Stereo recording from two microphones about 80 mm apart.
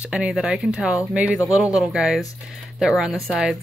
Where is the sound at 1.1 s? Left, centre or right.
Centre.